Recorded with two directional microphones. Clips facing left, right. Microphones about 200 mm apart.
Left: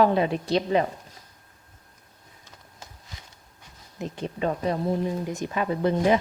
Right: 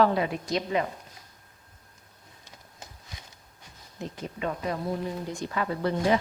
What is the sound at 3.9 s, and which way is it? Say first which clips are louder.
Speech: left 3 dB; 20° left (ahead or behind).